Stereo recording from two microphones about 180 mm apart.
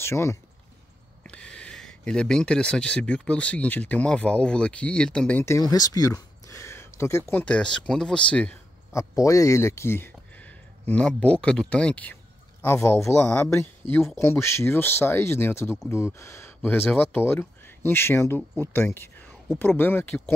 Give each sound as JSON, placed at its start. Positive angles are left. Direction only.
{"t": 0.0, "sound": "speech", "side_deg": 15}
{"t": 9.1, "sound": "speech", "side_deg": 15}